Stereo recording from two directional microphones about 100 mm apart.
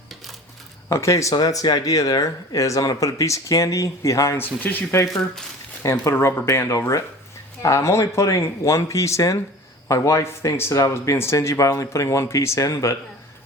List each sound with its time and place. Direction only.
0.9 s speech: 30° left (ahead or behind)
5.0 s speech: 5° left (ahead or behind)
5.8 s speech: 30° left (ahead or behind)